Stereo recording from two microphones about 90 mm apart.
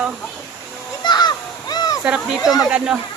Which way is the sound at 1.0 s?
55° left (ahead or behind).